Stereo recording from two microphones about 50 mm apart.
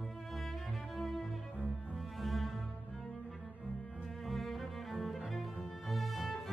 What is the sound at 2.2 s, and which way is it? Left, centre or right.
Music, centre.